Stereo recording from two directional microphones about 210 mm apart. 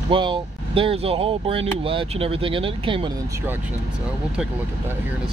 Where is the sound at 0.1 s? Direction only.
25° right (ahead or behind).